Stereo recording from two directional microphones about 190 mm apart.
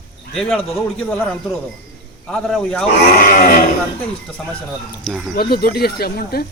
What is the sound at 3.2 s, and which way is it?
Speech, 50° left (ahead or behind).